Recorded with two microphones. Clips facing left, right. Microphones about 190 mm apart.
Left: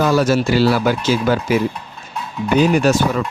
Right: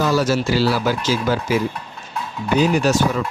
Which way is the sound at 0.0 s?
55° left (ahead or behind).